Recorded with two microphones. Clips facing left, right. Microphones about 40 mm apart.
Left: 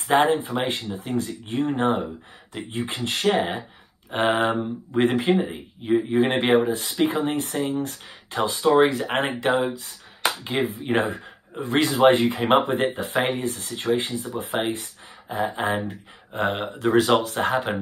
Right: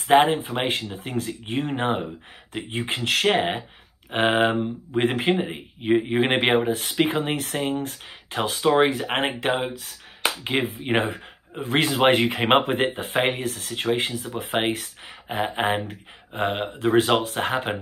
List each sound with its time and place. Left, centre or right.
0.1 s speech: right
13.4 s speech: right
16.3 s speech: right